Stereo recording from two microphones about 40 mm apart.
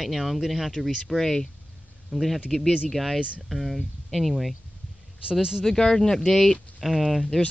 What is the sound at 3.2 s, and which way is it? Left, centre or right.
Speech, right.